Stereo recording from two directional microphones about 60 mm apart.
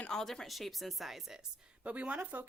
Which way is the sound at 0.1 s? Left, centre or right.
Centre.